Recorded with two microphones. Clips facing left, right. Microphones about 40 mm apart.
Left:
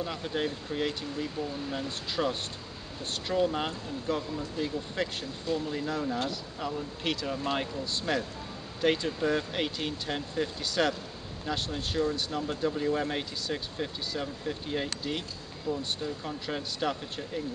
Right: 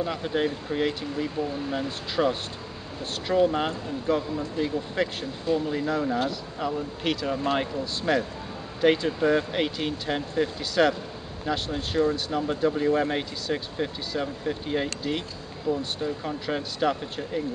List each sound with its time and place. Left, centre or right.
0.0 s speech: centre